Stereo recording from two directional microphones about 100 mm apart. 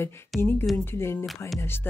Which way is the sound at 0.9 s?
25° left (ahead or behind).